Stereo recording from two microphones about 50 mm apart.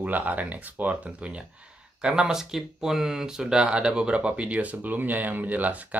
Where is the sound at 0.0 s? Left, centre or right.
Right.